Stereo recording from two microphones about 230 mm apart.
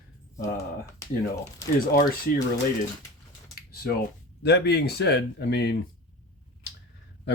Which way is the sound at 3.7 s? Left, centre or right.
Left.